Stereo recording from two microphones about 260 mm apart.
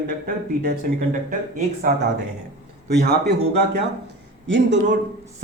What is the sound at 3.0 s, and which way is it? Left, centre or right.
Speech, right.